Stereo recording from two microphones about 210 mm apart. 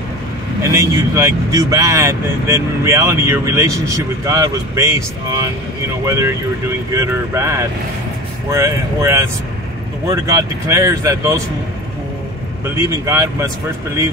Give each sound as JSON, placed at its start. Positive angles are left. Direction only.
{"t": 0.6, "sound": "speech", "side_deg": -15}
{"t": 12.7, "sound": "speech", "side_deg": -15}